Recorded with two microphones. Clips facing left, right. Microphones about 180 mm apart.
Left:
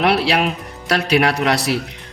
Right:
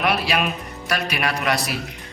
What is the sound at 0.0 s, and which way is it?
A man's voice, 70° left (ahead or behind).